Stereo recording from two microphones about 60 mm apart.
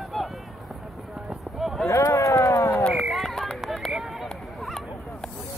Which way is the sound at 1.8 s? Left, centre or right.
Left.